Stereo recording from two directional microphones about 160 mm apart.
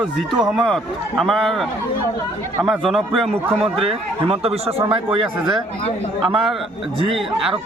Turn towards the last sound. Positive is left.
turn(degrees=0)  # may be behind; listen again after turning